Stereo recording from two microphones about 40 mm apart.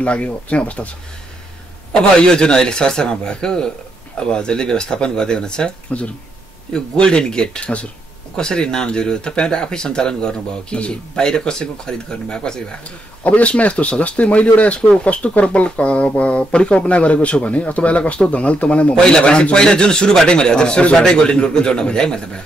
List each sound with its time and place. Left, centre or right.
0.0 s speech: left
1.9 s a man's voice: left
7.6 s speech: left
8.4 s a man's voice: centre
13.2 s speech: left
19.0 s a man's voice: left